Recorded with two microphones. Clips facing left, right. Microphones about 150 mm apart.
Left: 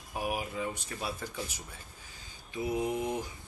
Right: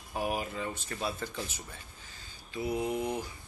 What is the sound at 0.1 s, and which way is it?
Speech, 10° left (ahead or behind).